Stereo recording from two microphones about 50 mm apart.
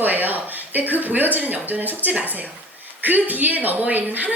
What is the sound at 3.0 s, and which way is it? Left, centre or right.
Speech, right.